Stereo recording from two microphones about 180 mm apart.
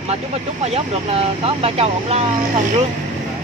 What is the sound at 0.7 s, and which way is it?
Speech, 35° right (ahead or behind).